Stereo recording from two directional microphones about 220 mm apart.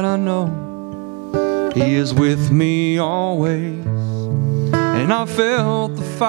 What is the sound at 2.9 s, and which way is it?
Music, 20° right (ahead or behind).